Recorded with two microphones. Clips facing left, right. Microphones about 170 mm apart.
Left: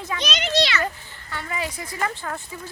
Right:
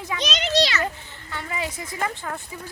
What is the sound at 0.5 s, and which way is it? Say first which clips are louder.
Speech: right 1 dB; 40° right (ahead or behind).